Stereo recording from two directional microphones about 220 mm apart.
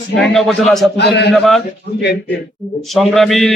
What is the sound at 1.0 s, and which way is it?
Speech, 50° left (ahead or behind).